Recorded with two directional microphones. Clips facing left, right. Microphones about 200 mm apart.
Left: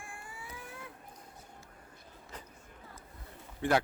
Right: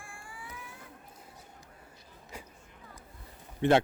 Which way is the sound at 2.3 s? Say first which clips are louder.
Right 3 dB; 10° right (ahead or behind).